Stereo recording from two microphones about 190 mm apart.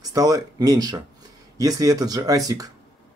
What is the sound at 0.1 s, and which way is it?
Speech, 20° right (ahead or behind).